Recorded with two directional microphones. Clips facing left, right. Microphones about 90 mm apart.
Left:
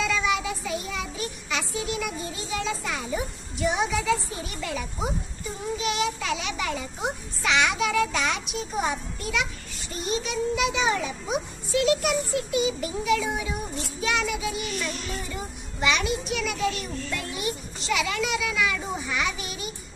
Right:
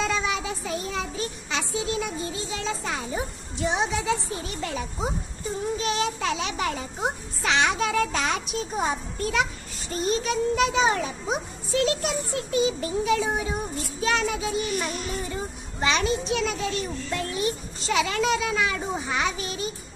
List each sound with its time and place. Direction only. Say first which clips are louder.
0.0 s child singing: left 1 dB; 35° right (ahead or behind)
5.8 s a child's voice: left 2 dB; 35° right (ahead or behind)